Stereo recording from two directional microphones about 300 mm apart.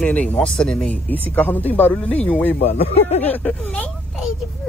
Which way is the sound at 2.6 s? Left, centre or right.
Left.